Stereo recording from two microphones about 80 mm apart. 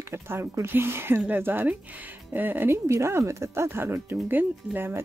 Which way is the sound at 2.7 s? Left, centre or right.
Right.